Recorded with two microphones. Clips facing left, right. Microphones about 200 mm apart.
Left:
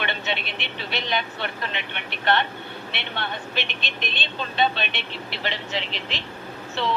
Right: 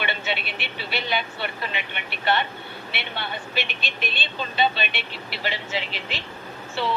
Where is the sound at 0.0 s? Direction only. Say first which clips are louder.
Even; 5° right (ahead or behind).